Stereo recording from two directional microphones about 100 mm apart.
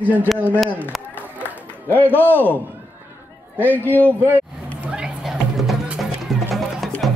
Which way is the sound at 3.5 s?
20° left (ahead or behind).